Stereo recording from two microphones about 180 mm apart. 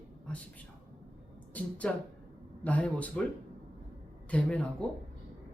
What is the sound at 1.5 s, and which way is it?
Speech, 10° left (ahead or behind).